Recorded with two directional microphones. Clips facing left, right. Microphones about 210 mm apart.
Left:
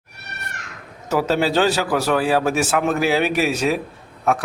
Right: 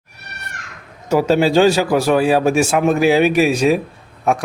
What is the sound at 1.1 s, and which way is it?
A man's voice, 15° right (ahead or behind).